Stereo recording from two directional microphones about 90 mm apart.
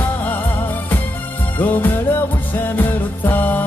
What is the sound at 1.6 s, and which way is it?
Music, 20° left (ahead or behind).